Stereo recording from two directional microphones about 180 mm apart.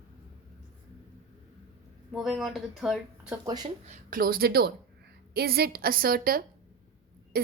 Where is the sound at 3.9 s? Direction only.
50° right (ahead or behind).